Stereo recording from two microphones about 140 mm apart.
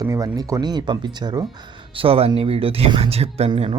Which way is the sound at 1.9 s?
40° right (ahead or behind).